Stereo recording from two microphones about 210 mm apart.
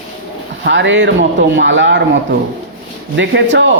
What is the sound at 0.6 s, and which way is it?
A man's voice, 60° right (ahead or behind).